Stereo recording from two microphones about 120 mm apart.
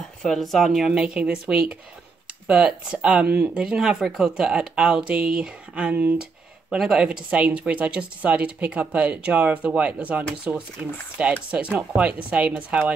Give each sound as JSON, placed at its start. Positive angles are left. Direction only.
{"t": 0.2, "sound": "speech", "side_deg": 0}